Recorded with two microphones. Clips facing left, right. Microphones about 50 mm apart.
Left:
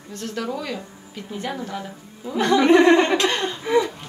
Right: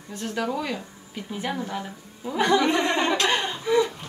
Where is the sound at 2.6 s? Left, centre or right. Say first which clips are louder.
Left 8 dB; left.